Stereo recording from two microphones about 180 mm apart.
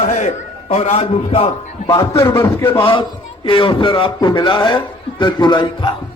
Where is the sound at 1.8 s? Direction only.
15° left (ahead or behind).